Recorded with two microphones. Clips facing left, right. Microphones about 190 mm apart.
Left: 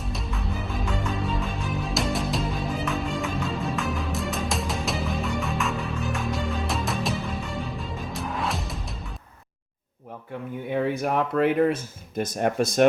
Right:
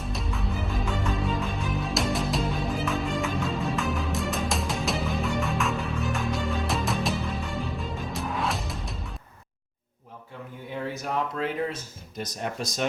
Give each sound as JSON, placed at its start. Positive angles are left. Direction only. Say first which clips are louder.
{"t": 0.0, "sound": "music", "louder": "even", "side_deg": 0}
{"t": 10.8, "sound": "speech", "louder": "left 5 dB", "side_deg": 60}